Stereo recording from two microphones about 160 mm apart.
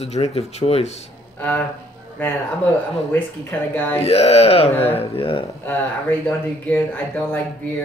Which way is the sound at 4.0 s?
40° left (ahead or behind).